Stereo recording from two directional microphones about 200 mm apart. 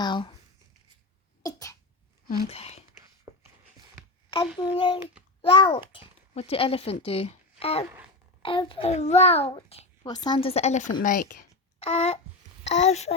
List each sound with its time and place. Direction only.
0.0 s a sound: 25° left (ahead or behind)
1.4 s cough: 15° left (ahead or behind)
2.5 s a child's voice: 30° left (ahead or behind)
3.3 s a sound: 20° right (ahead or behind)
4.6 s a child's voice: 25° left (ahead or behind); by 11.4 s 45° left (ahead or behind)
11.8 s a child's voice: 30° left (ahead or behind)